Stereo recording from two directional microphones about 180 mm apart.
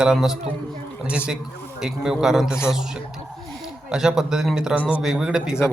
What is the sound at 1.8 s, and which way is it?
Speech, 5° right (ahead or behind).